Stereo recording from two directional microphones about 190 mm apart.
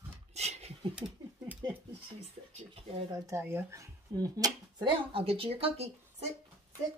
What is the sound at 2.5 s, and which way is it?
Speech, 30° right (ahead or behind).